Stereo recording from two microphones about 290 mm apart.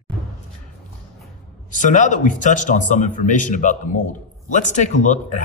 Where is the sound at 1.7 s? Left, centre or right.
Left.